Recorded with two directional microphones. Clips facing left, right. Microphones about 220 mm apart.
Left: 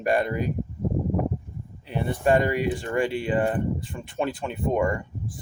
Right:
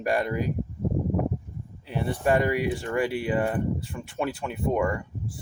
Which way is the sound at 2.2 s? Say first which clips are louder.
Left 2 dB; 30° left (ahead or behind).